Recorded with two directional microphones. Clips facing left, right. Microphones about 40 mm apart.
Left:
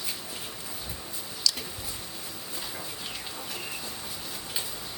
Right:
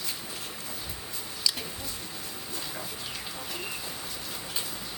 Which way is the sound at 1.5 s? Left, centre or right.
Right.